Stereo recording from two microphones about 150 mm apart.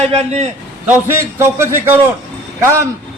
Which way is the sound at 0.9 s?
15° right (ahead or behind).